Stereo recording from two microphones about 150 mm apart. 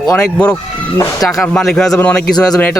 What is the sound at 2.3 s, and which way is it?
Speech, 25° left (ahead or behind).